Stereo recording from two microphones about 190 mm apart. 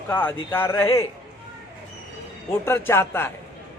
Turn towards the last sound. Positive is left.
turn(degrees=10)  # may be behind; listen again after turning